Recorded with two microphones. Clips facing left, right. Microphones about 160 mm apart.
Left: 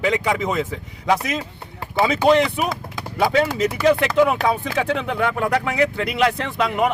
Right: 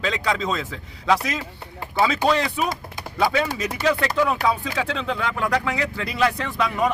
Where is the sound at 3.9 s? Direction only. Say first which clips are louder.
Left 4 dB; 20° left (ahead or behind).